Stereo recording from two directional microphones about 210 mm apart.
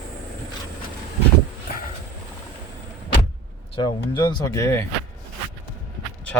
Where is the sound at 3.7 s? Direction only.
20° left (ahead or behind).